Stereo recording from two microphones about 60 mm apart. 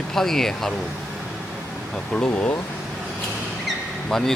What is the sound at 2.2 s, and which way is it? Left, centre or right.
Speech, left.